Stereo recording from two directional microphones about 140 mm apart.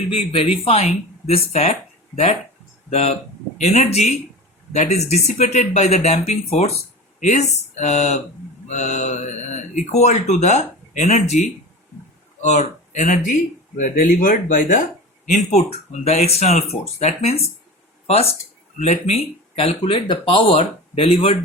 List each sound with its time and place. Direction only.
0.5 s speech: 45° left (ahead or behind)
2.9 s speech: 50° left (ahead or behind); by 14.8 s 65° left (ahead or behind)
15.3 s speech: 50° left (ahead or behind)